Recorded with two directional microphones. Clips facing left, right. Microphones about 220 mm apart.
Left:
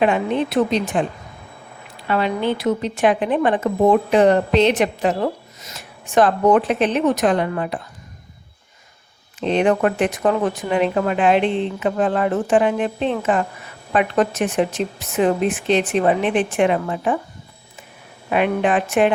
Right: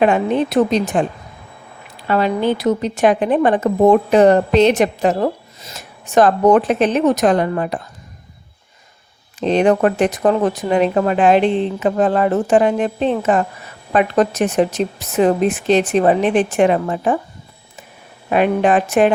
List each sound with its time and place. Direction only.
0.0 s a woman's voice: 45° right (ahead or behind)
2.0 s a woman's voice: 40° right (ahead or behind)
9.4 s a woman's voice: 40° right (ahead or behind)
18.3 s a woman's voice: 40° right (ahead or behind)